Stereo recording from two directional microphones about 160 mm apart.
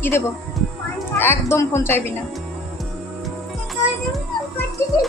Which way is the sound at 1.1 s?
15° left (ahead or behind).